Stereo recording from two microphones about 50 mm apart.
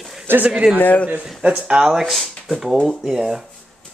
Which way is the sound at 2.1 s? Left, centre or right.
Centre.